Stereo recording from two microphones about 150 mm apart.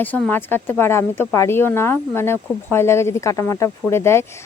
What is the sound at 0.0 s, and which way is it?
Speech, 10° left (ahead or behind).